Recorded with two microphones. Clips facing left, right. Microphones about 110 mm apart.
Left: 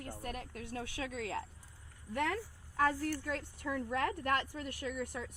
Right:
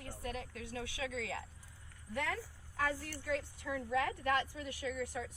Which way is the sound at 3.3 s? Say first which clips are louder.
Even; 50° left (ahead or behind).